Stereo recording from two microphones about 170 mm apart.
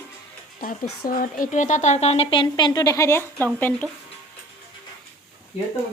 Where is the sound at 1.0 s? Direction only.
55° left (ahead or behind); by 3.8 s 10° left (ahead or behind).